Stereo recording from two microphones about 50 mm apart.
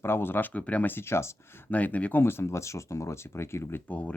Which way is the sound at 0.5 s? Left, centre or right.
Left.